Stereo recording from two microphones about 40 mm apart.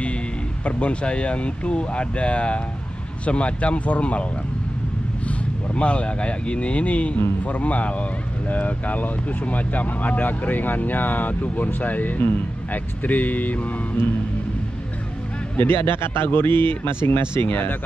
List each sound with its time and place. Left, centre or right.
0.7 s speech: left
5.3 s speech: left
15.6 s speech: left